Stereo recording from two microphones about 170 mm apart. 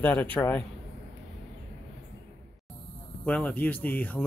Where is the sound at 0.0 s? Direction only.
10° left (ahead or behind).